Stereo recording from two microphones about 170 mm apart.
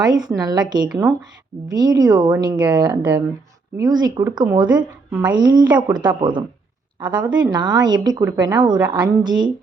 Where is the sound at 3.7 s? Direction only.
25° right (ahead or behind).